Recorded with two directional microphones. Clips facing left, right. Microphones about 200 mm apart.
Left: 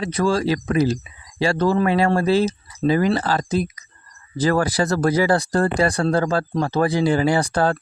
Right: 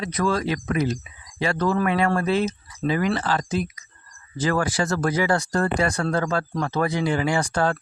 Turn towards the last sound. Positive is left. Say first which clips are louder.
# left 4 dB
turn(degrees=35)  # may be behind; listen again after turning